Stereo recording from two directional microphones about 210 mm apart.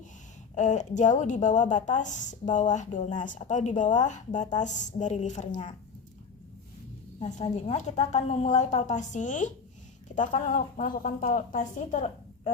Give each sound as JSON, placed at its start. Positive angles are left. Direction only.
{"t": 0.5, "sound": "a woman's voice", "side_deg": 35}
{"t": 7.2, "sound": "a woman's voice", "side_deg": 35}